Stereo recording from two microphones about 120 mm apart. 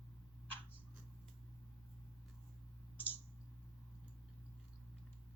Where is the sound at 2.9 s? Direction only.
15° left (ahead or behind).